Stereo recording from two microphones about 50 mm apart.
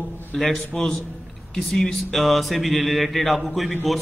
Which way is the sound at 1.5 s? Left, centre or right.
Centre.